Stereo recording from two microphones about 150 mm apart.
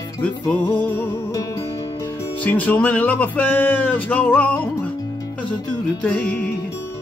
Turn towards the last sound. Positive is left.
turn(degrees=10)  # may be behind; listen again after turning